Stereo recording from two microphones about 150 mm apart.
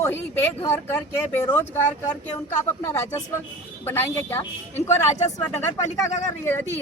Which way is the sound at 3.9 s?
15° left (ahead or behind).